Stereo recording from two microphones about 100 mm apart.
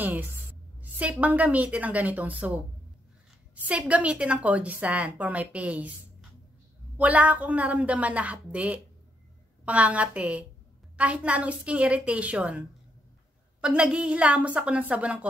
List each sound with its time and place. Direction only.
0.7 s a sound: 15° right (ahead or behind)
1.2 s a woman's voice: 15° right (ahead or behind)
3.6 s a woman's voice: 15° right (ahead or behind)
7.0 s a woman's voice: 15° right (ahead or behind)